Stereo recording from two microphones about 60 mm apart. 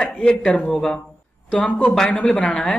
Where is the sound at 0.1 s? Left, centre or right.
Centre.